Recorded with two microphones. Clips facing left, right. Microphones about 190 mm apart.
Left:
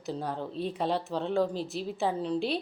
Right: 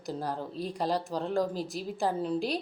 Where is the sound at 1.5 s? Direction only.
45° right (ahead or behind).